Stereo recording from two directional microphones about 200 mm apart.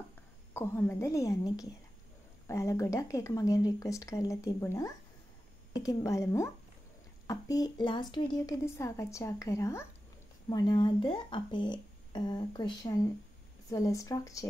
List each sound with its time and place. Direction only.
0.5 s a woman's voice: 10° left (ahead or behind)